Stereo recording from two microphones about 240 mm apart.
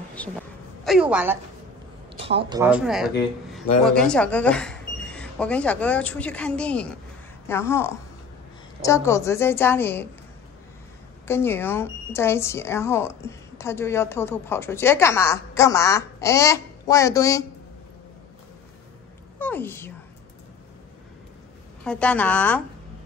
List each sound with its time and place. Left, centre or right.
0.2 s a woman's voice: centre
1.1 s a woman's voice: centre
2.1 s speech: right
2.6 s a woman's voice: centre
11.2 s speech: centre
19.3 s a woman's voice: centre
21.8 s a woman's voice: centre